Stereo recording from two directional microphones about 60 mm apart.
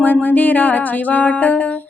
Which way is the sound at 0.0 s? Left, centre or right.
Left.